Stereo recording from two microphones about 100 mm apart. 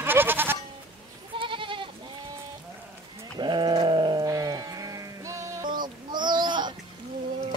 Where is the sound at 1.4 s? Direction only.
60° right (ahead or behind).